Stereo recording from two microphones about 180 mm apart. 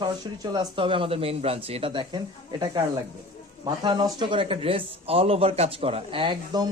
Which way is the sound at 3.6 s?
25° right (ahead or behind).